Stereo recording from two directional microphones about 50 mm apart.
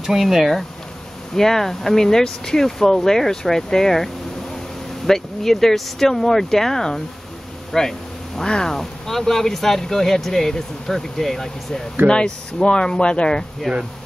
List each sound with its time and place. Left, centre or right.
0.0 s speech: centre
12.1 s speech: centre